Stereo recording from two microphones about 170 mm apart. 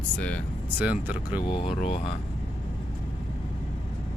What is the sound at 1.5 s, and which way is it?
Speech, 35° left (ahead or behind).